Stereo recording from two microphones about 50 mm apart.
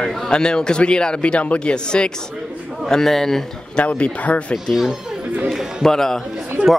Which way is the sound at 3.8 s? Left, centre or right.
Left.